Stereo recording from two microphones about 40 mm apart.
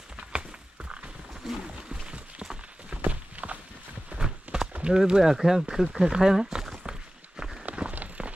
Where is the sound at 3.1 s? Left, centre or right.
Right.